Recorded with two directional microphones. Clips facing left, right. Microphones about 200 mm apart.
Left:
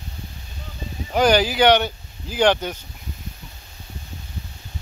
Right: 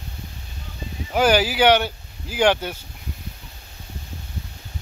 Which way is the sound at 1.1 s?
5° right (ahead or behind).